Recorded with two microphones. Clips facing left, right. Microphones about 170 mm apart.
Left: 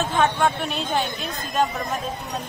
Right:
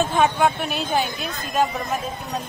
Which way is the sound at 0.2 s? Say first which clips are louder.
Even; 5° right (ahead or behind).